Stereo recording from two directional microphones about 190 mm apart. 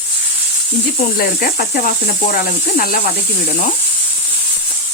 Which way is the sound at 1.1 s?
55° left (ahead or behind).